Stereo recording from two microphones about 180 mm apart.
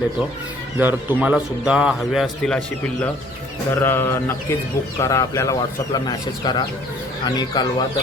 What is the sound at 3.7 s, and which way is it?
Speech, 10° left (ahead or behind).